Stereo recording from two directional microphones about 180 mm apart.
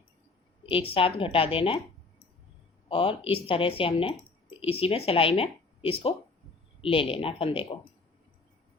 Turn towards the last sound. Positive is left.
turn(degrees=30)  # may be behind; listen again after turning